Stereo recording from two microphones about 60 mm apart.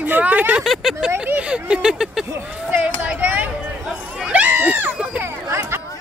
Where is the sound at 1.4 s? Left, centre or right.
Centre.